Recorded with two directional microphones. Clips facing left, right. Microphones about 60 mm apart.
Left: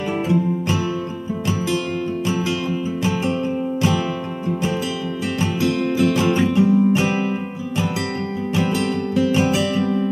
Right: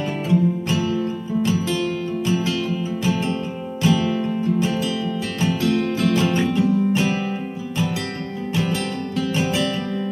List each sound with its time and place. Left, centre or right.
0.3 s music: centre
2.2 s music: centre
3.8 s music: centre
9.1 s music: centre